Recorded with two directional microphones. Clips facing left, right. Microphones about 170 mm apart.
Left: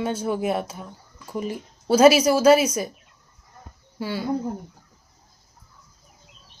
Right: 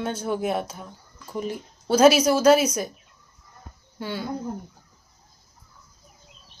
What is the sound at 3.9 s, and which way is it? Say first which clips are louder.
Speech: left 3 dB; 5° left (ahead or behind).